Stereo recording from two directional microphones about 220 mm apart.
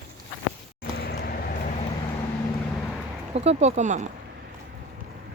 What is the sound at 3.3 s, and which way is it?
Speech, 30° right (ahead or behind).